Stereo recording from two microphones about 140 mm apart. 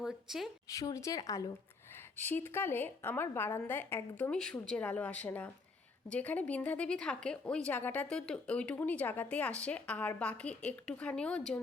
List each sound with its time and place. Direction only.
0.0 s a woman's voice: centre (ahead or behind)
0.7 s a woman's voice: 25° left (ahead or behind); by 11.6 s 5° left (ahead or behind)